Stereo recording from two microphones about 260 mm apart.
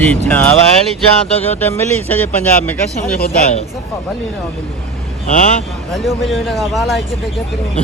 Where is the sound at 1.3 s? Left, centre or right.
Left.